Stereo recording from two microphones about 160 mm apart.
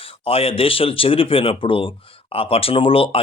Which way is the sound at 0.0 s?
35° left (ahead or behind).